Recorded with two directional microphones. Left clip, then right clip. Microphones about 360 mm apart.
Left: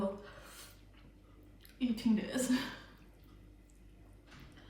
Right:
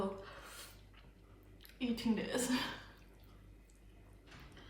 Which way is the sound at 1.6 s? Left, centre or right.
Centre.